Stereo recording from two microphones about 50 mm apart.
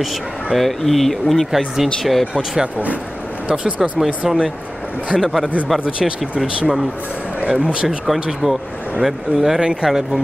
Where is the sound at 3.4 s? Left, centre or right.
Right.